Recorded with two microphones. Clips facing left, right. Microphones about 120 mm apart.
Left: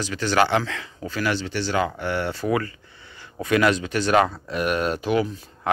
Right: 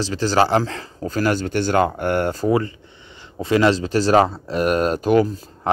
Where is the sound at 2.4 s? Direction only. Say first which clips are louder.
Right 5 dB; 30° right (ahead or behind).